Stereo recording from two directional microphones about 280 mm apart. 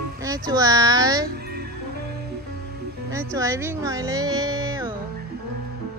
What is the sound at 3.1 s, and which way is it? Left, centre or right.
Speech, centre.